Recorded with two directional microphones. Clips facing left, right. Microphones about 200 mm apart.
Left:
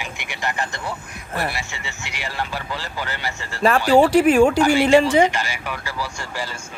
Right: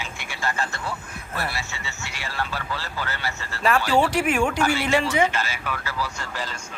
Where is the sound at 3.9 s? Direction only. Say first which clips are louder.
Left 11 dB; 40° left (ahead or behind).